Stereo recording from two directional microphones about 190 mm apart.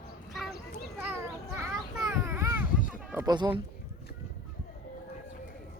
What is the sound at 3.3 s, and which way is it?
Speech, 25° right (ahead or behind).